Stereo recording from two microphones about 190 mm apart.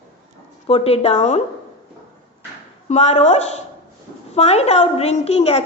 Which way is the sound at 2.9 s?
35° left (ahead or behind).